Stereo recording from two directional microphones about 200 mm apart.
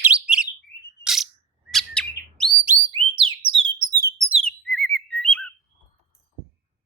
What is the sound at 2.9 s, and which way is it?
Bird, 25° right (ahead or behind).